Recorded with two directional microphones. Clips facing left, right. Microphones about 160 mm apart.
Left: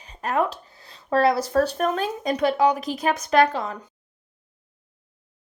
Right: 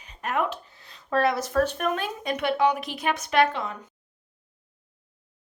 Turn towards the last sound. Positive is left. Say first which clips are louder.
# left 3 dB
turn(degrees=35)  # may be behind; listen again after turning